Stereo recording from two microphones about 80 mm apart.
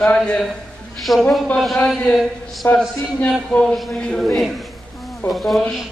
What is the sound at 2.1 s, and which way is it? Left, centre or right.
Speech, centre.